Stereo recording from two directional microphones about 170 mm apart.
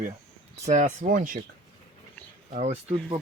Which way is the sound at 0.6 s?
45° right (ahead or behind).